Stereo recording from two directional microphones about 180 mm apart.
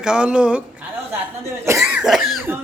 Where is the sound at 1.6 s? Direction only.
15° right (ahead or behind).